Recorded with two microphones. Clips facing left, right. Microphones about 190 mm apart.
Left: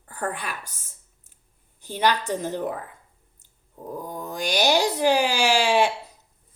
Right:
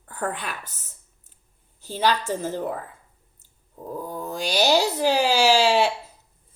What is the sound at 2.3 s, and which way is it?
Speech, 15° left (ahead or behind).